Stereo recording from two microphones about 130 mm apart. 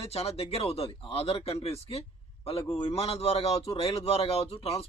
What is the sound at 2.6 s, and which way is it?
Speech, 35° left (ahead or behind).